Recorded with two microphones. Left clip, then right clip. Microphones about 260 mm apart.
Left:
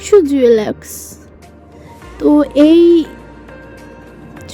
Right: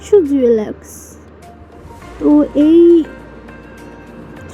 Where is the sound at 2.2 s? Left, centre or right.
Left.